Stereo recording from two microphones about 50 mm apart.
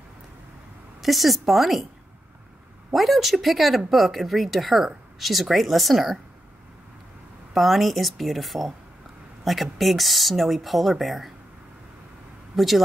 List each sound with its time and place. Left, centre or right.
1.0 s speech: centre
2.9 s speech: centre
7.5 s speech: centre
12.5 s speech: centre